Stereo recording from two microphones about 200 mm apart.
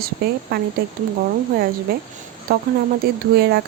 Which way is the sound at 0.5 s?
50° right (ahead or behind).